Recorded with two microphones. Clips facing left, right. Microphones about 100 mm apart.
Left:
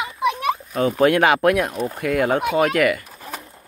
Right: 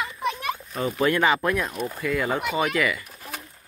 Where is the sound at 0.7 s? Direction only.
65° left (ahead or behind).